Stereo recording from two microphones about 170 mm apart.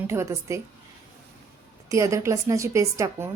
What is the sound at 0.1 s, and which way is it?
Speech, 15° right (ahead or behind).